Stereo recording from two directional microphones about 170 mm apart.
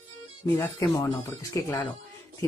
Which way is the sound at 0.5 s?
15° left (ahead or behind).